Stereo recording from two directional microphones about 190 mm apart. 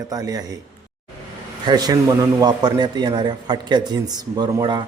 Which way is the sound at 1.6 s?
20° right (ahead or behind).